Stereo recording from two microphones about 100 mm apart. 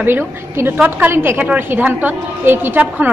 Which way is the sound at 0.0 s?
20° right (ahead or behind).